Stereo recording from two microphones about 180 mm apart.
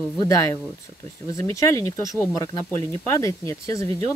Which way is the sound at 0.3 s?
15° left (ahead or behind).